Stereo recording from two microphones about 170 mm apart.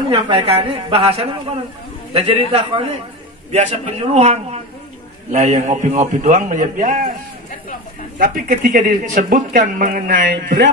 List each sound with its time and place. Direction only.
0.1 s a woman's voice: 35° right (ahead or behind); by 7.1 s 55° right (ahead or behind)
8.2 s speech: 55° right (ahead or behind)